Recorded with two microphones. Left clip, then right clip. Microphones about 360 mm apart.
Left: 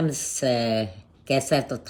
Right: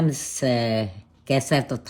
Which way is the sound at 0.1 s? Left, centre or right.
Centre.